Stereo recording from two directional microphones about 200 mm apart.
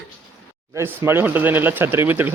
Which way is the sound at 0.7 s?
15° right (ahead or behind).